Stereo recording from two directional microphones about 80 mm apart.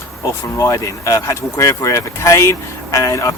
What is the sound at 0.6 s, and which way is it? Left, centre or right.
Speech, left.